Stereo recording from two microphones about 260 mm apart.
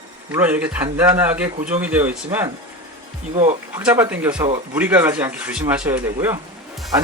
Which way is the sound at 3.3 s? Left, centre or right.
Right.